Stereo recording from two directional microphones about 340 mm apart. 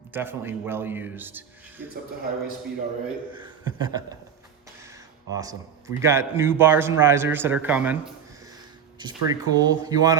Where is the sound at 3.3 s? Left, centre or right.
Centre.